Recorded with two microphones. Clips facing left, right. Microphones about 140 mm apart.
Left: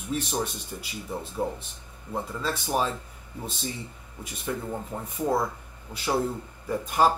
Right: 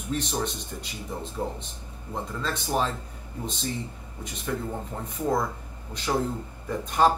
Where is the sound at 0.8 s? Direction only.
5° left (ahead or behind).